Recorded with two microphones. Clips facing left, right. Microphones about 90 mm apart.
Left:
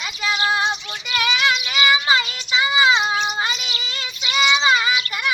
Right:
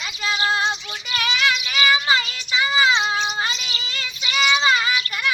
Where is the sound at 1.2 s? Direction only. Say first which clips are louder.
Left 2 dB; 20° left (ahead or behind).